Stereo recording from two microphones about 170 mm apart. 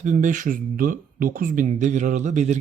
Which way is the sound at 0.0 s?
50° right (ahead or behind).